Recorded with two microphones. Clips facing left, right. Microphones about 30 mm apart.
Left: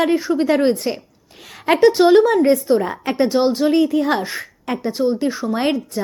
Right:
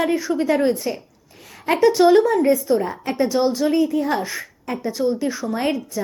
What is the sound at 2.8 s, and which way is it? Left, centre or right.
Speech, left.